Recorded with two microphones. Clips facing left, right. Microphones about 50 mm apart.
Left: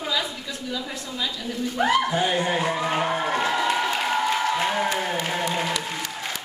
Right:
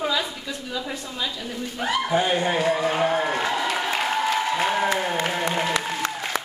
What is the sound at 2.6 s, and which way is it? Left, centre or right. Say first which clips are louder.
Speech: right 2 dB; centre.